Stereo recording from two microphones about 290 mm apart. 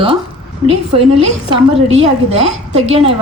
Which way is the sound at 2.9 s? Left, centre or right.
Right.